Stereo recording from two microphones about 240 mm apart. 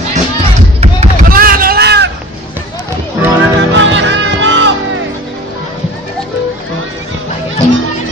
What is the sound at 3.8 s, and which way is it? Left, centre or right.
Music, right.